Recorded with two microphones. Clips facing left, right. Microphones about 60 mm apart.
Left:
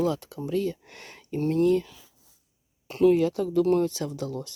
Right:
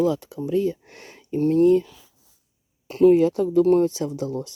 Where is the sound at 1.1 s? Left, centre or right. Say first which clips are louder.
Right 6 dB; centre.